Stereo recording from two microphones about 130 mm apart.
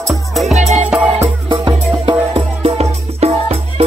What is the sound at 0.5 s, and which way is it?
Music, 60° right (ahead or behind).